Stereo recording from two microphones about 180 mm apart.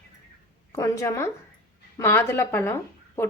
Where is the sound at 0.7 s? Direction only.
20° left (ahead or behind).